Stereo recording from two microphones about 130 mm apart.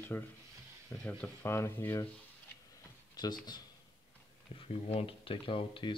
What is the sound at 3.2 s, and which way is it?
Speech, 30° left (ahead or behind).